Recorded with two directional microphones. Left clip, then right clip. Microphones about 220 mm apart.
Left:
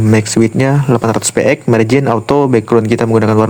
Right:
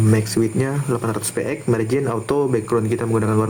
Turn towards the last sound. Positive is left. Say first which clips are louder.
# left 9 dB
turn(degrees=35)  # may be behind; listen again after turning